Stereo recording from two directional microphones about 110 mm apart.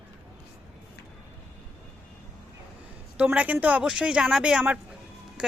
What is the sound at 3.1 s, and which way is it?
Speech, 10° right (ahead or behind).